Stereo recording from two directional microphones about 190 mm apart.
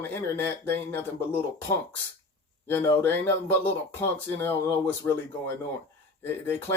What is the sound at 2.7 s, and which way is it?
Speech, 10° left (ahead or behind).